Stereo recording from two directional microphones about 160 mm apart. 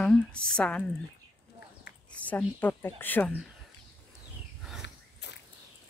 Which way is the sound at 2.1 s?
10° left (ahead or behind).